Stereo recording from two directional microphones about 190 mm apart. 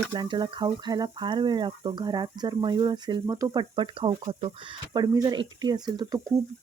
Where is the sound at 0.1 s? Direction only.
25° right (ahead or behind).